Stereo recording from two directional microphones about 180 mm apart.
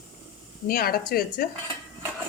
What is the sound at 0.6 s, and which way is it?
Speech, 55° left (ahead or behind).